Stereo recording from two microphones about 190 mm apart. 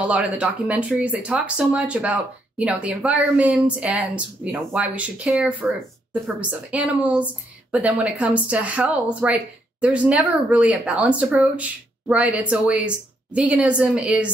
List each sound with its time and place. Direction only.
0.0 s speech: 5° right (ahead or behind)